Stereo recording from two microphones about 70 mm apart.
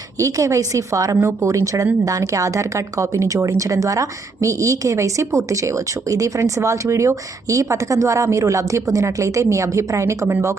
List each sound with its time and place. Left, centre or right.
0.2 s speech: right